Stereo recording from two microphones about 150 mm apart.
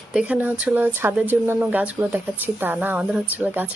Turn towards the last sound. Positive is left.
turn(degrees=-10)  # may be behind; listen again after turning